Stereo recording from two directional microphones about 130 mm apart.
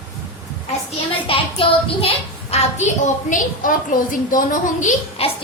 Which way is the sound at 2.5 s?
55° left (ahead or behind).